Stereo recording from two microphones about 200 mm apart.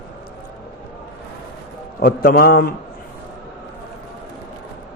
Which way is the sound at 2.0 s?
50° left (ahead or behind).